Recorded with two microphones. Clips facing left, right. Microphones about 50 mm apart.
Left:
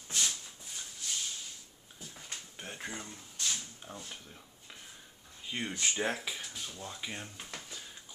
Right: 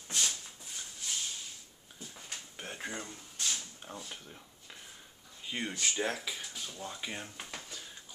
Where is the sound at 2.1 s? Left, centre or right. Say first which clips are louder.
Even; centre.